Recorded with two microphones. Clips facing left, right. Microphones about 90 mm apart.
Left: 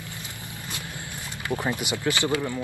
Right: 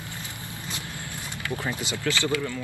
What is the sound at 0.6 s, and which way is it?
Vehicle, 20° right (ahead or behind).